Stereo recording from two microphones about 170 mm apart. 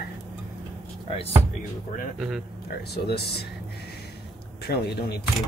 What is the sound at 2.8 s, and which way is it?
Speech, 70° left (ahead or behind).